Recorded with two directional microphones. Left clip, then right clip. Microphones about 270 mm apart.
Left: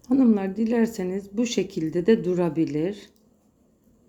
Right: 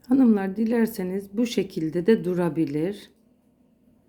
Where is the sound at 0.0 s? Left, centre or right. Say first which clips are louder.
Right 1 dB; centre.